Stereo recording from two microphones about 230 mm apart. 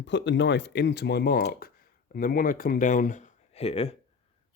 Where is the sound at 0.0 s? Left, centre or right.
Left.